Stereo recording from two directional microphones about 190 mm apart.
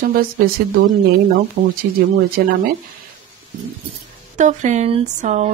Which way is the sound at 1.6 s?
40° right (ahead or behind).